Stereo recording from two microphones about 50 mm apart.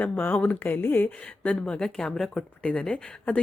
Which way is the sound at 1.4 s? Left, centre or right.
Left.